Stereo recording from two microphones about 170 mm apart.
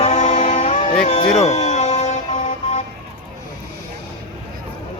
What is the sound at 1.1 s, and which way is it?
Vehicle, 45° left (ahead or behind).